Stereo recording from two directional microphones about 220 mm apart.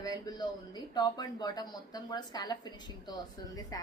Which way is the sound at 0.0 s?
15° left (ahead or behind).